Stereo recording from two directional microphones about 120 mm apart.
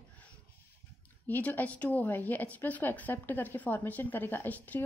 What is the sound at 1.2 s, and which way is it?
A woman's voice, 15° left (ahead or behind).